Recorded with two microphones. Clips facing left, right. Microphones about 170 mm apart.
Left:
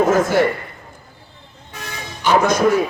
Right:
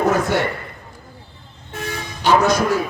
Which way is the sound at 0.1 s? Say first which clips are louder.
Left 4 dB; 70° right (ahead or behind).